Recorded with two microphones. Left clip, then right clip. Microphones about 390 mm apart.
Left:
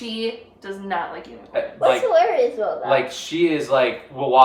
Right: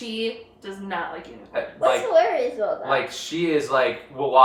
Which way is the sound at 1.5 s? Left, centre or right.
Centre.